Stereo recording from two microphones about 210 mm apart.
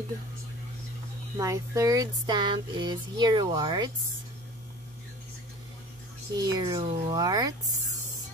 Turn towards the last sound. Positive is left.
turn(degrees=-15)  # may be behind; listen again after turning